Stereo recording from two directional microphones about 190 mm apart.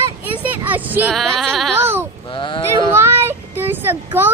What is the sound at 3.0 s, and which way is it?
Child singing, 10° right (ahead or behind).